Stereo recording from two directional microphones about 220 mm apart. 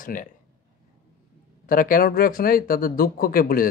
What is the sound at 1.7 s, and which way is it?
Speech, 40° left (ahead or behind).